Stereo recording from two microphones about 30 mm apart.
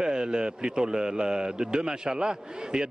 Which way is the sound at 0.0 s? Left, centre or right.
Right.